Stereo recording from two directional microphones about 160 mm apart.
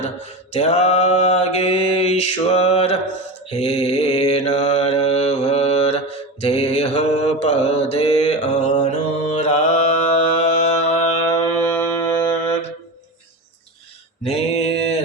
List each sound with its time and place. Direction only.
0.5 s mantra: 40° left (ahead or behind)
11.3 s music: 10° left (ahead or behind)
14.3 s mantra: 40° left (ahead or behind)